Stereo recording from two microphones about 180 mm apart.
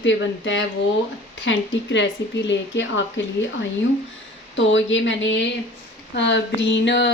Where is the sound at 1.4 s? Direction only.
80° left.